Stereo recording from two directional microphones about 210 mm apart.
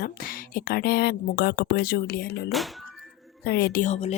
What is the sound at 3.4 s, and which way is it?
Speech, 50° left (ahead or behind).